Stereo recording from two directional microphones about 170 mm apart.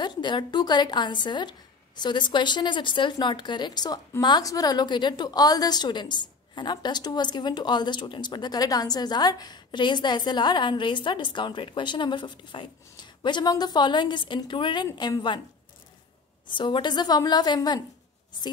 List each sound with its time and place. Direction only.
0.0 s speech: 25° left (ahead or behind)
16.5 s speech: 30° left (ahead or behind)